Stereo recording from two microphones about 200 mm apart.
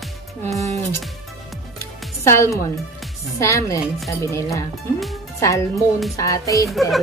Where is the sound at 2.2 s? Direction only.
15° left (ahead or behind).